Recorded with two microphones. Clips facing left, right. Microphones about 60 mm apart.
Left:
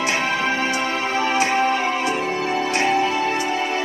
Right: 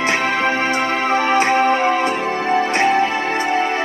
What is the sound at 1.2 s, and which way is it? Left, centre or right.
Music, right.